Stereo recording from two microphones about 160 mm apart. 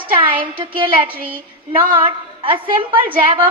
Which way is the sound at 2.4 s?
30° right (ahead or behind).